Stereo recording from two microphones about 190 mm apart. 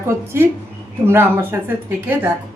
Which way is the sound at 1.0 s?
10° right (ahead or behind).